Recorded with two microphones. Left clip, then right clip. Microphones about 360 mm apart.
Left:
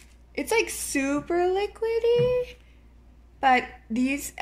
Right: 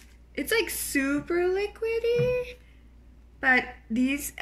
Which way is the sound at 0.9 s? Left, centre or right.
Left.